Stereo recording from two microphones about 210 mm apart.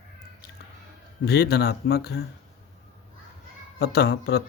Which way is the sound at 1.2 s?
50° left (ahead or behind).